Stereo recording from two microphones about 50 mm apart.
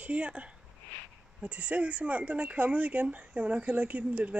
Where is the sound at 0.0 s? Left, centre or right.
Right.